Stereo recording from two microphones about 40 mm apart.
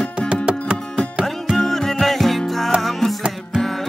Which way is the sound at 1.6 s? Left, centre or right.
Centre.